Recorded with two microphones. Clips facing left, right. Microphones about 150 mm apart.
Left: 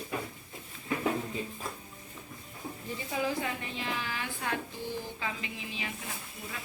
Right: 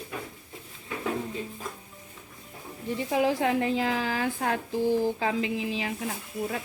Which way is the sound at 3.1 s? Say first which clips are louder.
Right 8 dB; 80° right.